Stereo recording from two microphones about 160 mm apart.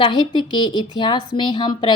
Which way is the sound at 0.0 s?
30° left (ahead or behind).